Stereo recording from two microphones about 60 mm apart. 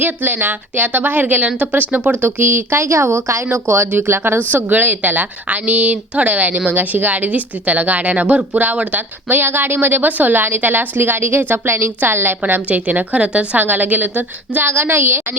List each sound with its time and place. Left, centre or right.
0.0 s a woman's voice: right
3.5 s a woman's voice: right